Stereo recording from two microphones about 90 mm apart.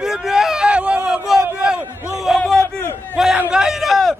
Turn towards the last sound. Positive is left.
turn(degrees=0)  # may be behind; listen again after turning